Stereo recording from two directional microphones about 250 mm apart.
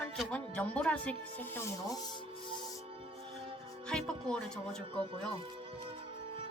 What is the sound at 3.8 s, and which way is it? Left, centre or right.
Speech, centre.